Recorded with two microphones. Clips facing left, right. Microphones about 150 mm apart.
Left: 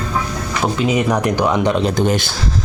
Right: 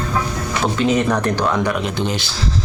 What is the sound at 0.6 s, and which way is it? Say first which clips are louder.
Speech: even; 10° left (ahead or behind).